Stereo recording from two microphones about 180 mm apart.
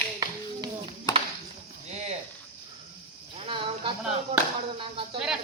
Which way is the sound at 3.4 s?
30° right (ahead or behind).